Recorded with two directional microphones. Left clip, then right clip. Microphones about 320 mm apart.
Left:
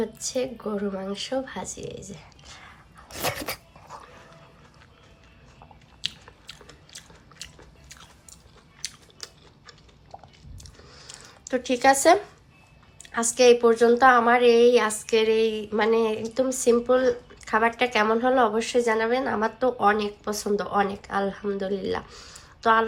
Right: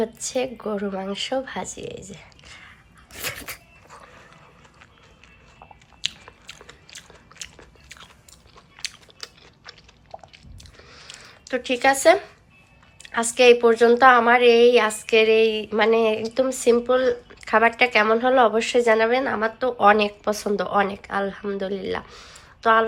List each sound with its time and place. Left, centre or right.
0.0 s a woman's voice: centre
2.1 s whispering: centre
3.9 s dog: centre
6.2 s biting: centre
8.8 s chewing: centre
10.6 s a sound: centre
13.1 s a woman's voice: centre